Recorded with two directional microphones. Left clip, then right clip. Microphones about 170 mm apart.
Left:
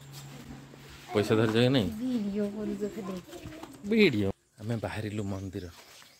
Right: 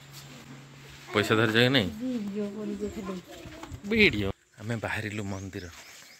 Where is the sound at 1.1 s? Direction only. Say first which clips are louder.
Right 2 dB; 5° left (ahead or behind).